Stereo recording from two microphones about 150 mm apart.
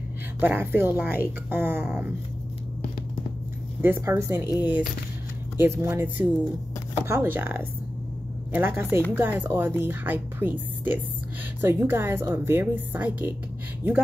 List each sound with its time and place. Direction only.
0.4 s speech: 15° right (ahead or behind)
3.8 s speech: 15° right (ahead or behind)
4.5 s speech: 25° left (ahead or behind)
5.6 s speech: 20° right (ahead or behind)